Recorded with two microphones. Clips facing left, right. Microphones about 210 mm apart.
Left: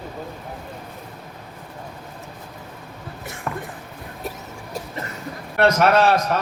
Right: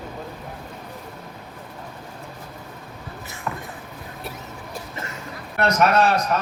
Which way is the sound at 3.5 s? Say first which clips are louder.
Left 2 dB; 45° left (ahead or behind).